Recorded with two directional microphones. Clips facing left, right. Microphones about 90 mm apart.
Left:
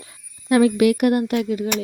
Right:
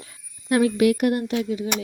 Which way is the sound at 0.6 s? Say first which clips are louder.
Left 3 dB; 90° left.